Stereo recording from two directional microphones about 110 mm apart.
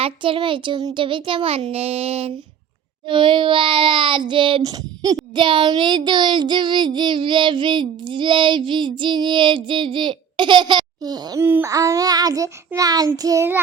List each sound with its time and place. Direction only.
0.0 s child singing: 50° right (ahead or behind)
1.7 s a sound: 65° right (ahead or behind)
3.1 s child singing: 50° right (ahead or behind)
4.6 s a child's voice: 35° right (ahead or behind)
5.3 s child singing: 50° right (ahead or behind)
11.3 s a sound: 20° right (ahead or behind)
11.7 s a child's voice: 35° right (ahead or behind)